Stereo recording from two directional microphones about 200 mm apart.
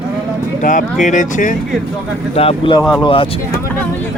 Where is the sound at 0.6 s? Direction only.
40° left (ahead or behind).